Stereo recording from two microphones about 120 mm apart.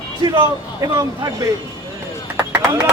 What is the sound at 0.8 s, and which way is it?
Speech, 30° right (ahead or behind).